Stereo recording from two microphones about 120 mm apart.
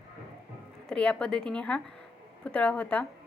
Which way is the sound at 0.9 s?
10° left (ahead or behind).